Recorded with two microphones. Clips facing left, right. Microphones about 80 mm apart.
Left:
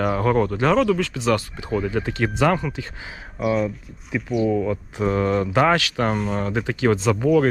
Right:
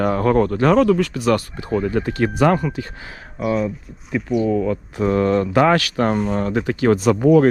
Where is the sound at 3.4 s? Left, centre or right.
Centre.